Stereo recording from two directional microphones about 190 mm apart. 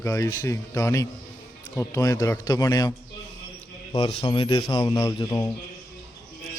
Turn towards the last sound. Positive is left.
turn(degrees=15)  # may be behind; listen again after turning